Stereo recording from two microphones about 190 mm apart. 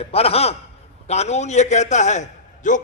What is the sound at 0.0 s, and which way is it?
A man's voice, 30° left (ahead or behind).